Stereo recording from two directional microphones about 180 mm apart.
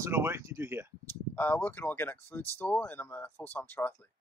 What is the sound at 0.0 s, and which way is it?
Speech, 15° right (ahead or behind).